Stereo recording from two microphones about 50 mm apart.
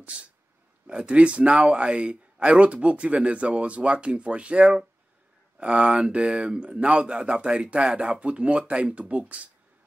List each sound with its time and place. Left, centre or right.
0.0 s speech: right